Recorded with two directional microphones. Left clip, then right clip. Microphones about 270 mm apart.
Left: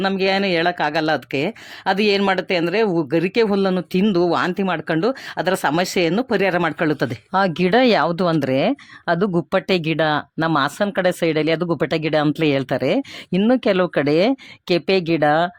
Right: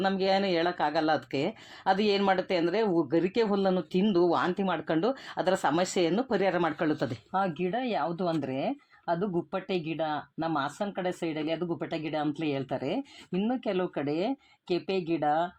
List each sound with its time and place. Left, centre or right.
0.0 s speech: left